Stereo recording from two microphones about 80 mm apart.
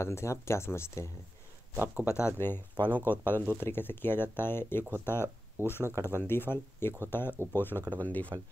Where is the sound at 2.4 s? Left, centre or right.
Left.